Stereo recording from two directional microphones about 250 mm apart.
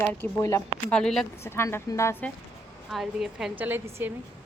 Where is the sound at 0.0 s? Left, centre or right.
Centre.